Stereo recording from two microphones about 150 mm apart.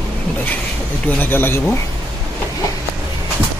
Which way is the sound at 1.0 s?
15° left (ahead or behind).